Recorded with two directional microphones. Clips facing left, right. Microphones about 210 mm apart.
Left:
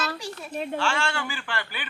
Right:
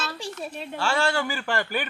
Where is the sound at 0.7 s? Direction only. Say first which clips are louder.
Right 5 dB; 40° right (ahead or behind).